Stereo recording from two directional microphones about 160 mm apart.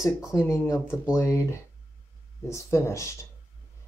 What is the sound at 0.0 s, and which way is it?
Speech, 20° left (ahead or behind).